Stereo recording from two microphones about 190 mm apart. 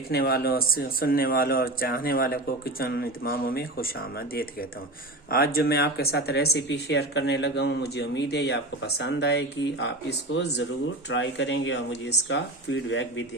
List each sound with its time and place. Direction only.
0.1 s speech: 55° left (ahead or behind); by 13.2 s 75° left (ahead or behind)